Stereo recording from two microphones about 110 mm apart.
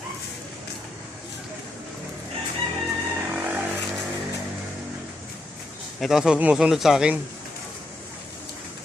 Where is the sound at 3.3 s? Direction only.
15° right (ahead or behind).